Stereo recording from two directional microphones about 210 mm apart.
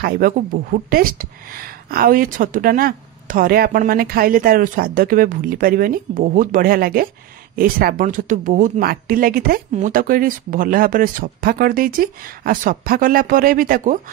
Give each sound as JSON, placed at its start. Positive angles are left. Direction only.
{"t": 0.0, "sound": "speech", "side_deg": -45}